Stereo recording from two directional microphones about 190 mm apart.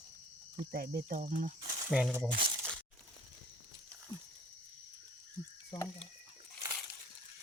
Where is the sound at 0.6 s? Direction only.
55° right (ahead or behind).